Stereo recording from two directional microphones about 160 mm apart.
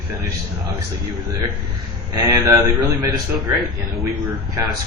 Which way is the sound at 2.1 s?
20° right (ahead or behind).